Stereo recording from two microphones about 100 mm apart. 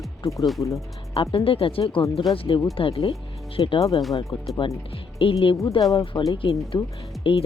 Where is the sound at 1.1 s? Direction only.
70° left (ahead or behind).